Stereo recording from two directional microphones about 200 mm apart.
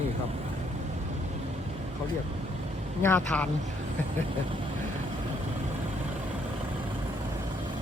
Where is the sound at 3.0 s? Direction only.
10° left (ahead or behind).